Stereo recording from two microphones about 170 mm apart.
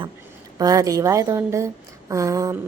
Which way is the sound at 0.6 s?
20° right (ahead or behind).